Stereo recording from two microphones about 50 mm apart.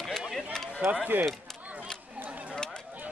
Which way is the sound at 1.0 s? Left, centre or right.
Right.